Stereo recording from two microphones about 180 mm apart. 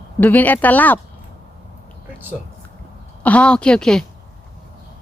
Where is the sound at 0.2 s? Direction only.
10° left (ahead or behind).